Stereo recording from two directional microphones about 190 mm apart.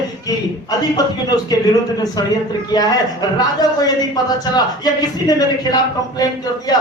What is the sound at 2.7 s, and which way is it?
A man's voice, 20° left (ahead or behind).